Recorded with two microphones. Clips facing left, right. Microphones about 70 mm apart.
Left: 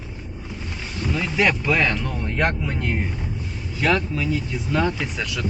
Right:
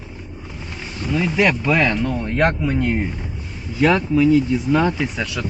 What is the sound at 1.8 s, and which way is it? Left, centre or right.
Speech, right.